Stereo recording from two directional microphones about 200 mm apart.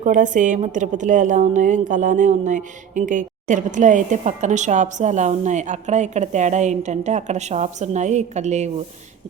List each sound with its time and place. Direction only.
0.0 s a woman's voice: 40° right (ahead or behind)